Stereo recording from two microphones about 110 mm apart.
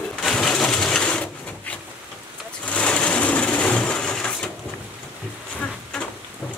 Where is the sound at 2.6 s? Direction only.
10° left (ahead or behind).